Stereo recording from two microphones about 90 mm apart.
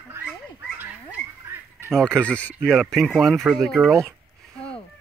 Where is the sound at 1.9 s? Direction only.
10° left (ahead or behind).